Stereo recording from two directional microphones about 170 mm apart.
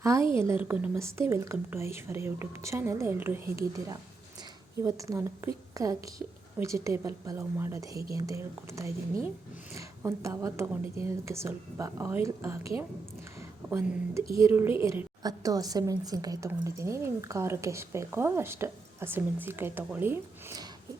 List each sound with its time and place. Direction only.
0.0 s a woman's voice: 15° right (ahead or behind)